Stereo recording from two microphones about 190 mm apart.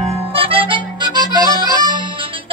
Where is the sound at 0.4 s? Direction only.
30° right (ahead or behind).